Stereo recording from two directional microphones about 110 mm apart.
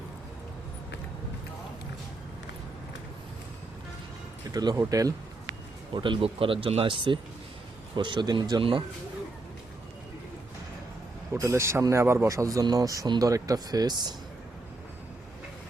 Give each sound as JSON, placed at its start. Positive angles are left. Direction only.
{"t": 4.5, "sound": "speech", "side_deg": -35}
{"t": 5.9, "sound": "speech", "side_deg": -50}
{"t": 11.3, "sound": "speech", "side_deg": -25}